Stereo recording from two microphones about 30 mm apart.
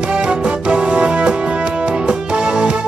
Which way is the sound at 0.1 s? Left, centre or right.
Right.